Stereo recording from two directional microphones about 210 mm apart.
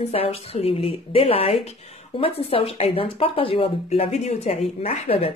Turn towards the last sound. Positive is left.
turn(degrees=30)  # may be behind; listen again after turning